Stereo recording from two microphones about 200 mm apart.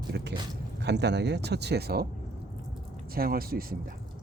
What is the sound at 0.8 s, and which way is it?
Speech, 60° right (ahead or behind).